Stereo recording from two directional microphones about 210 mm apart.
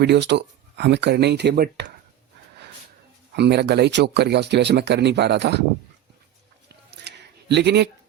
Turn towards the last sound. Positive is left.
turn(degrees=-55)  # may be behind; listen again after turning